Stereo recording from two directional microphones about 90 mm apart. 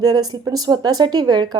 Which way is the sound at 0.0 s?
45° right (ahead or behind).